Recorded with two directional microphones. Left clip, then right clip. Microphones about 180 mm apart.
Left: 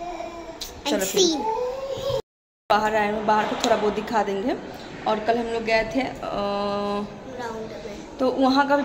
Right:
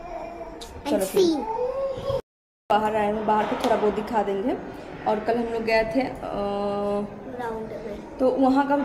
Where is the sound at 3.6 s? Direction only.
35° right (ahead or behind).